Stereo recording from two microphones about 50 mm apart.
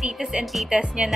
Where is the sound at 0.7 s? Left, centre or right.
Right.